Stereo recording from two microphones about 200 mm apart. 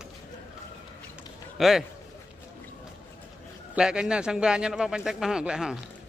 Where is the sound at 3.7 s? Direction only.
5° right (ahead or behind).